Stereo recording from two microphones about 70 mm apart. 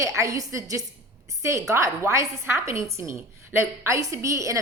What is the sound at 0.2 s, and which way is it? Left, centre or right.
A woman's voice, right.